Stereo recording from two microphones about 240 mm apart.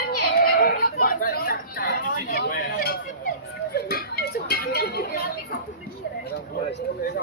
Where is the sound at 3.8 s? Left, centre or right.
Left.